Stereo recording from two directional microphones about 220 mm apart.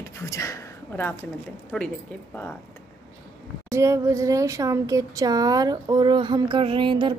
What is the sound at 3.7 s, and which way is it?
Speech, 15° right (ahead or behind).